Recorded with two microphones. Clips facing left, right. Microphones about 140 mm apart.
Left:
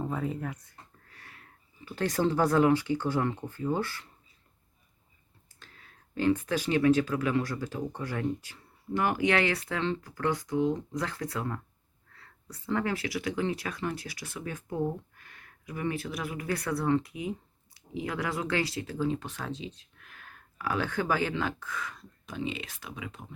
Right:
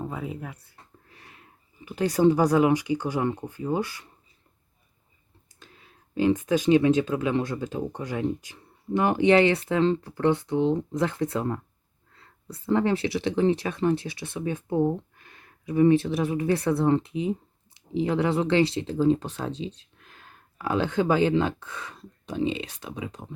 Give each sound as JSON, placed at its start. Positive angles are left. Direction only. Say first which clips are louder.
{"t": 0.0, "sound": "speech", "louder": "left 1 dB", "side_deg": -5}
{"t": 1.0, "sound": "sniff", "louder": "right 2 dB", "side_deg": -20}
{"t": 1.8, "sound": "speech", "louder": "right 7 dB", "side_deg": -15}
{"t": 5.5, "sound": "speech", "louder": "right 3 dB", "side_deg": -15}